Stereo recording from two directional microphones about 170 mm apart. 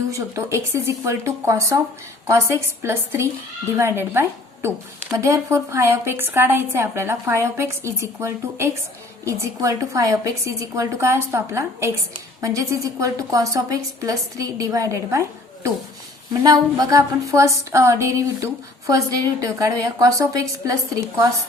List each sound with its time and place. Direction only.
0.1 s a woman's voice: 20° right (ahead or behind)